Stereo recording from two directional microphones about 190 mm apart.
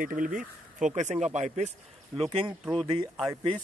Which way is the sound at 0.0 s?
45° right (ahead or behind).